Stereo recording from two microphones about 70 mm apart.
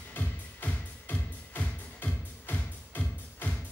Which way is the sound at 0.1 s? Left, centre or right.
Left.